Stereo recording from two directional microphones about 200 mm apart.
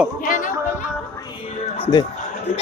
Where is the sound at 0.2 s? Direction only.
40° left (ahead or behind).